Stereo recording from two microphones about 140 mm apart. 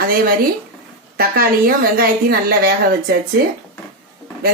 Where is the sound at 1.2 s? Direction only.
90° right.